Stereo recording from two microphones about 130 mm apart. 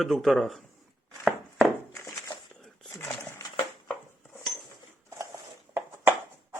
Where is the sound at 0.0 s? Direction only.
Centre (ahead or behind).